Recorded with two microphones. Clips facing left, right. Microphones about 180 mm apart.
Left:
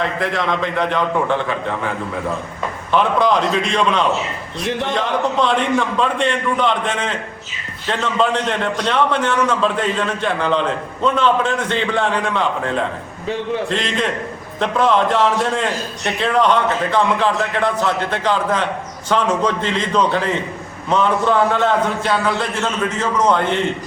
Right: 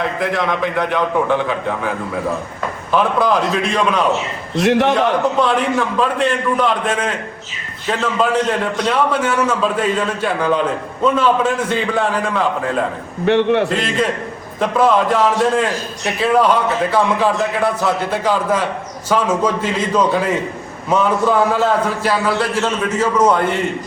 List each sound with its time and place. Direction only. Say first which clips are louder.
0.0 s a man's voice: right 1 dB; 10° right (ahead or behind)
2.9 s a man's voice: even; 5° right (ahead or behind)
4.5 s a man's voice: right 9 dB; 80° right
5.4 s a man's voice: right 1 dB; 5° right (ahead or behind)
13.2 s a man's voice: right 8 dB; 75° right (ahead or behind)
13.7 s a man's voice: right 2 dB; 5° right (ahead or behind)